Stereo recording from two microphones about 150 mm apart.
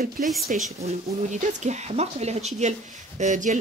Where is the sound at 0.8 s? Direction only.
55° right (ahead or behind).